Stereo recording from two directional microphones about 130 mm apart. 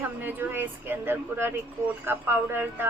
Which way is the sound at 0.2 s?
15° right (ahead or behind).